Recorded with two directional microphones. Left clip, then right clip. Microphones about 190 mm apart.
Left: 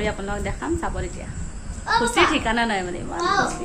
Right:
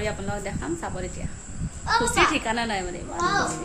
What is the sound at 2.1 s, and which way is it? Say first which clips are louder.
Speech: left 3 dB; centre (ahead or behind).